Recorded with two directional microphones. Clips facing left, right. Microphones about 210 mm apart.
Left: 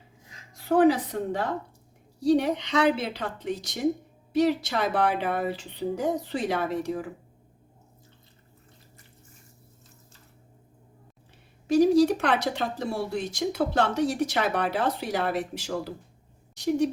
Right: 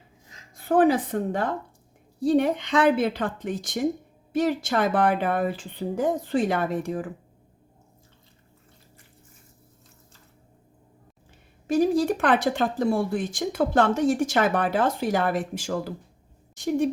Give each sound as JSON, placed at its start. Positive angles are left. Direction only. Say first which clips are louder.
{"t": 0.5, "sound": "a woman's voice", "louder": "right 1 dB", "side_deg": -55}
{"t": 11.7, "sound": "speech", "louder": "left 2 dB", "side_deg": -50}